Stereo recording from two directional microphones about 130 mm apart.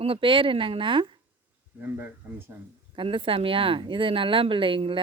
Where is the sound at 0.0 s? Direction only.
45° right (ahead or behind).